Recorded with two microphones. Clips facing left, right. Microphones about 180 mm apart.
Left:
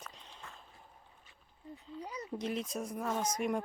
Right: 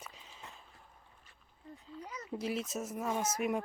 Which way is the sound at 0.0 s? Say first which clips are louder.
Left 1 dB; 5° right (ahead or behind).